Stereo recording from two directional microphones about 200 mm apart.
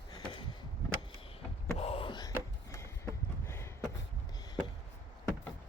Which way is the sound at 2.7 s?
15° left (ahead or behind).